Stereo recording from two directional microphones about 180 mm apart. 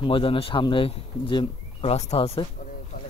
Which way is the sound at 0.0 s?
30° left (ahead or behind).